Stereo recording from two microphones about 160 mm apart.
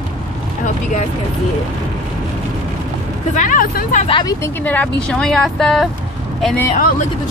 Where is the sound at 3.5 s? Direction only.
60° left (ahead or behind).